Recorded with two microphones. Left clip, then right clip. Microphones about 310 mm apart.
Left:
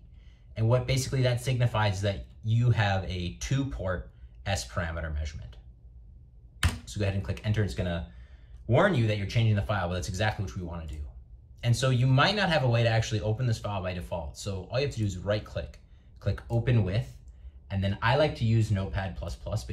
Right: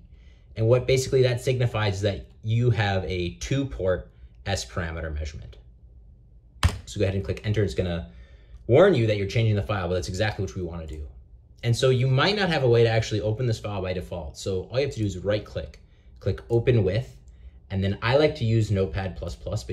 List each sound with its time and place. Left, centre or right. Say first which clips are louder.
0.6 s speech: right 8 dB; centre
6.9 s speech: right 7 dB; centre